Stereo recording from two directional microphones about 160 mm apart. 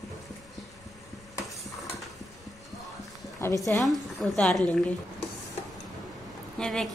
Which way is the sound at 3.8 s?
Centre (ahead or behind).